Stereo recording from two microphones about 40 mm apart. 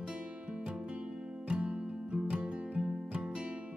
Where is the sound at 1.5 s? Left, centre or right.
Right.